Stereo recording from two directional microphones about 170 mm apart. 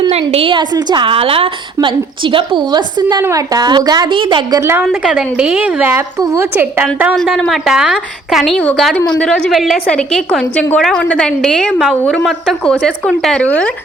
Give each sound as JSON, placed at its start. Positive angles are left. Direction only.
{"t": 0.1, "sound": "a woman's voice", "side_deg": -35}
{"t": 4.6, "sound": "a woman's voice", "side_deg": -15}
{"t": 7.2, "sound": "a woman's voice", "side_deg": 0}